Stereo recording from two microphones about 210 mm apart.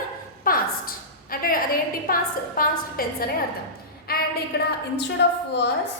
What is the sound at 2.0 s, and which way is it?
A woman's voice, 45° left (ahead or behind).